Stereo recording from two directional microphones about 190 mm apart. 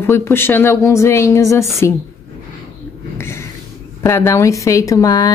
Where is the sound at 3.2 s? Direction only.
15° left (ahead or behind).